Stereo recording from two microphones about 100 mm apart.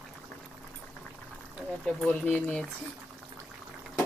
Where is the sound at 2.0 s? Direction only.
15° left (ahead or behind).